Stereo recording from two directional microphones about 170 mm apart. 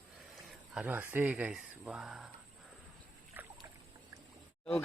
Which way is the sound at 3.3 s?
10° right (ahead or behind).